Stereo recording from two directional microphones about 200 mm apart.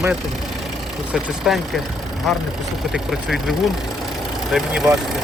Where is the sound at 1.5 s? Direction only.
Centre (ahead or behind).